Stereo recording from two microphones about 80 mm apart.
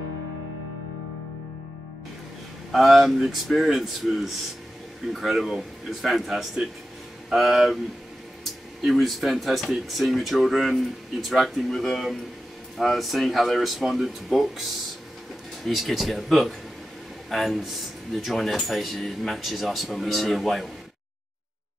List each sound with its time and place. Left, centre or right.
2.7 s speech: centre
8.8 s speech: centre
15.6 s speech: centre